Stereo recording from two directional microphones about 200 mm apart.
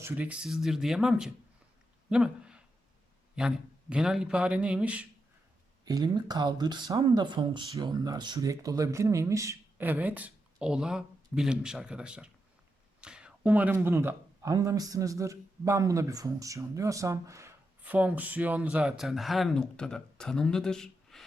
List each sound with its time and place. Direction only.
0.0 s speech: 5° right (ahead or behind)
2.0 s a sound: 5° right (ahead or behind)
3.3 s speech: 5° right (ahead or behind)
5.8 s speech: 20° right (ahead or behind); by 21.2 s centre (ahead or behind)